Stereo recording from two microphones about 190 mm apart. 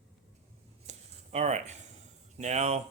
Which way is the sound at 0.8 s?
35° right (ahead or behind).